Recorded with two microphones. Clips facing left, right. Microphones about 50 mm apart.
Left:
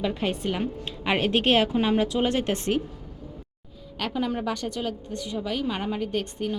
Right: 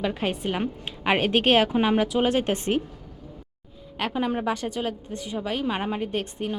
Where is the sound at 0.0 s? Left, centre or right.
Centre.